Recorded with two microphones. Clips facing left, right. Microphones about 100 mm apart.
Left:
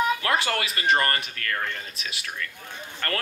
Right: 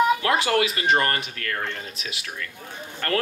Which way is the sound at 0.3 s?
15° right (ahead or behind).